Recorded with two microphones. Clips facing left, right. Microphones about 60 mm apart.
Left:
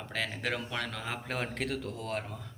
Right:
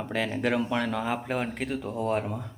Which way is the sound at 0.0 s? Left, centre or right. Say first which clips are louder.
Right 7 dB; centre.